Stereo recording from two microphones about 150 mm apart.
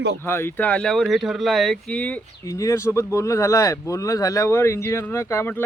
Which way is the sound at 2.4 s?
20° left (ahead or behind).